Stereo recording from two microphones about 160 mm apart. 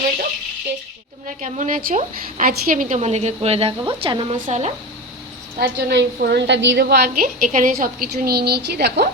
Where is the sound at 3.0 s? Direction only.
45° right (ahead or behind).